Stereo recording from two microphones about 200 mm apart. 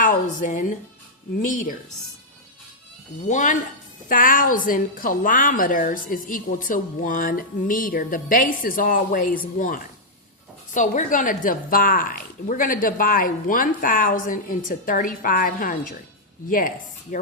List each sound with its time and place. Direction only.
0.0 s a woman's voice: 40° left (ahead or behind)
3.2 s a woman's voice: 40° left (ahead or behind)